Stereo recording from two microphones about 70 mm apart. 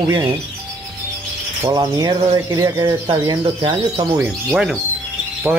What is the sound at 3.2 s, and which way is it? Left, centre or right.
Speech, right.